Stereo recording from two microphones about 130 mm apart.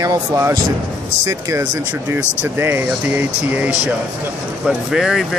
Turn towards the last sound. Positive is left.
turn(degrees=-5)  # may be behind; listen again after turning